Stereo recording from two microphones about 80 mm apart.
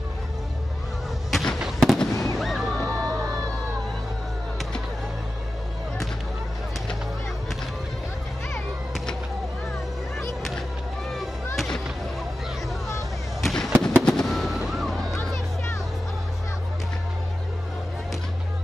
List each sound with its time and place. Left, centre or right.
1.3 s fireworks: centre
2.3 s music: centre
3.1 s music: right
11.5 s fireworks: centre
13.4 s fireworks: centre